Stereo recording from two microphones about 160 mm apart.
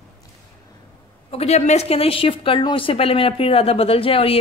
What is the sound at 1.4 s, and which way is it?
A woman's voice, 40° left (ahead or behind).